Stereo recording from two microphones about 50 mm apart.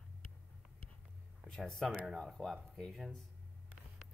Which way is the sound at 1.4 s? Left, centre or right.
Centre.